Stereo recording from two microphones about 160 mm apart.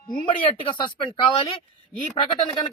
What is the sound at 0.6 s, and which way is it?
Speech, 30° left (ahead or behind).